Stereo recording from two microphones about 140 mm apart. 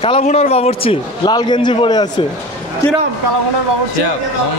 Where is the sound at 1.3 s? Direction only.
30° left (ahead or behind).